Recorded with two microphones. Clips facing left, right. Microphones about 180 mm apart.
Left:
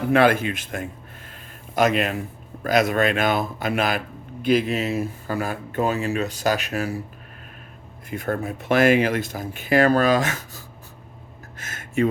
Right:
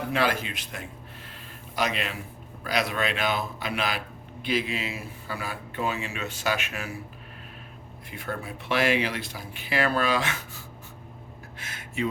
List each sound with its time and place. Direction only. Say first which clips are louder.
0.1 s speech: left 10 dB; 55° left (ahead or behind); by 7.0 s 40° left (ahead or behind)
8.1 s speech: left 8 dB; 45° left (ahead or behind)
11.5 s a sound: left 9 dB; 45° left (ahead or behind)